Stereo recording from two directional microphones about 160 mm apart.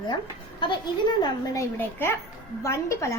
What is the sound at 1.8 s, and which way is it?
A woman's voice, 15° left (ahead or behind).